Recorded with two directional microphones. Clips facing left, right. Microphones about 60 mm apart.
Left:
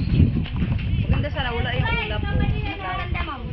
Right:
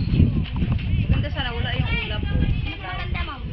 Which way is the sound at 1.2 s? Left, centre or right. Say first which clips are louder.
Left 2 dB; left.